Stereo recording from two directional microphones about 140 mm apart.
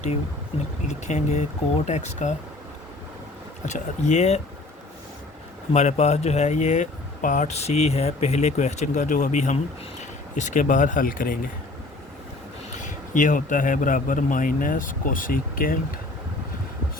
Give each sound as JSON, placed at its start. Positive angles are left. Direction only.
{"t": 0.9, "sound": "speech", "side_deg": 55}
{"t": 3.7, "sound": "speech", "side_deg": 55}
{"t": 5.7, "sound": "speech", "side_deg": 50}
{"t": 12.7, "sound": "a man's voice", "side_deg": 65}